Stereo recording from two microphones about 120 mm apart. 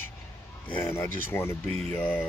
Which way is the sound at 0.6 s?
20° left (ahead or behind).